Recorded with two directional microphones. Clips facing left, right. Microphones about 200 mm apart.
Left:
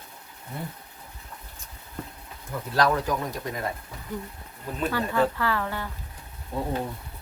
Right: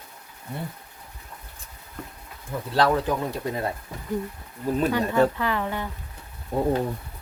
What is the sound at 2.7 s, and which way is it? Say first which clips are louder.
Speech: right 2 dB; 25° right (ahead or behind).